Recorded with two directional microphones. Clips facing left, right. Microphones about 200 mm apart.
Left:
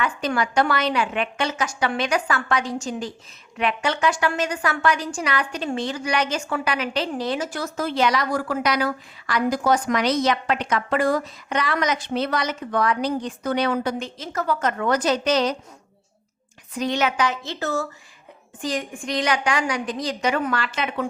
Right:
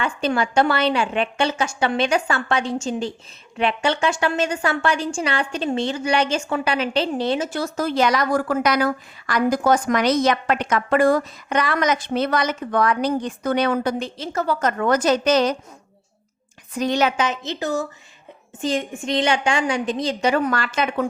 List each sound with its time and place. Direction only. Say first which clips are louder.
0.0 s a woman's voice: right 2 dB; 25° right (ahead or behind)
7.8 s a woman's voice: right 2 dB; 40° right (ahead or behind)
14.0 s a woman's voice: right 3 dB; 30° right (ahead or behind); by 15.5 s 50° right (ahead or behind)
16.7 s a woman's voice: right 3 dB; 40° right (ahead or behind)
17.2 s a woman's voice: right 1 dB; 20° right (ahead or behind); by 21.1 s 45° right (ahead or behind)